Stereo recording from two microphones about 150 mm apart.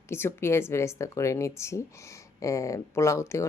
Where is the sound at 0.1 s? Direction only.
15° left (ahead or behind).